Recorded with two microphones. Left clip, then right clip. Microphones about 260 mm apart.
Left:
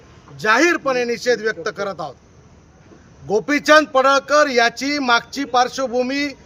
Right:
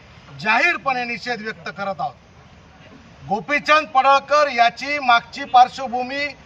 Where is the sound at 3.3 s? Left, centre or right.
Left.